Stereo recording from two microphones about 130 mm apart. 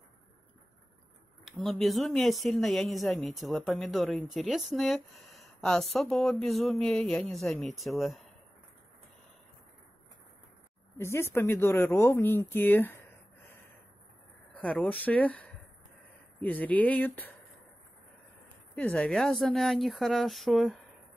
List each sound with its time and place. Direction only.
1.4 s speech: centre (ahead or behind)
11.0 s speech: 20° left (ahead or behind)
14.5 s speech: 10° left (ahead or behind)
18.8 s speech: 10° left (ahead or behind)